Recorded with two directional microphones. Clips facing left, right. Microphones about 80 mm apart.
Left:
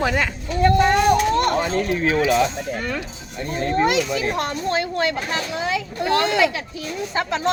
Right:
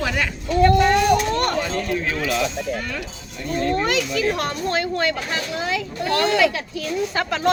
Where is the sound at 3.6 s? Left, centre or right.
Left.